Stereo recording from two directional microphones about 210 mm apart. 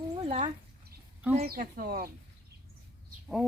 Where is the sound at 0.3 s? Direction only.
30° right (ahead or behind).